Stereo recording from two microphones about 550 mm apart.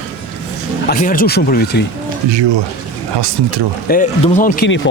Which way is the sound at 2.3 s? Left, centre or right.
Right.